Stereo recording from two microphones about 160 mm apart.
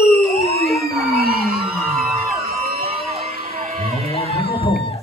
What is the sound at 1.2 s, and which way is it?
Music, 70° right (ahead or behind).